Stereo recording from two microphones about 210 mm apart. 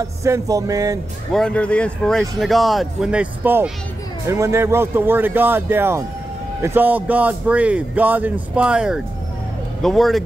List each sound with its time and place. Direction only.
0.2 s a man's voice: 15° right (ahead or behind)
1.3 s a man's voice: 5° left (ahead or behind)